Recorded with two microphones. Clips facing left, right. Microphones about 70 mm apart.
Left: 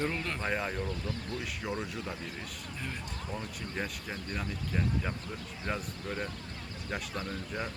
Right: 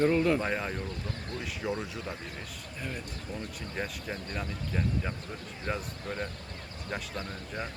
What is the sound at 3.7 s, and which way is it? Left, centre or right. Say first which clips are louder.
Speech: right 2 dB; centre.